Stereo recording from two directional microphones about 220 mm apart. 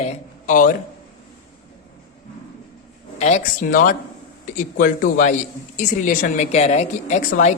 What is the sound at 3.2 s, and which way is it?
A woman's voice, 35° left (ahead or behind).